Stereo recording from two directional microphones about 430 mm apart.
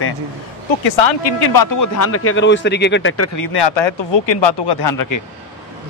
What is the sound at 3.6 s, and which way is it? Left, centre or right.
Speech, left.